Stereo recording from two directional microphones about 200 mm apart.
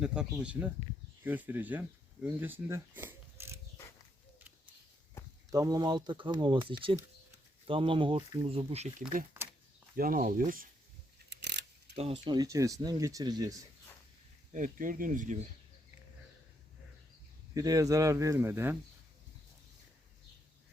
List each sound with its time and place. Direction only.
0.0 s speech: 5° right (ahead or behind)
5.5 s speech: 20° right (ahead or behind); by 10.7 s 45° right (ahead or behind)
11.3 s a sound: 55° right (ahead or behind)
11.9 s speech: 25° right (ahead or behind)
14.5 s speech: 40° right (ahead or behind)
17.5 s speech: 15° right (ahead or behind)